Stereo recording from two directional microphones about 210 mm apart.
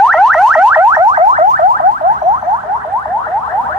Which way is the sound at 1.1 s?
35° right (ahead or behind).